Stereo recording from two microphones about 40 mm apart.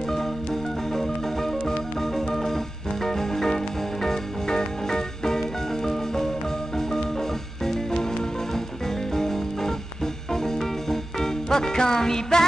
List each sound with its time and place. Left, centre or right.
0.9 s music: centre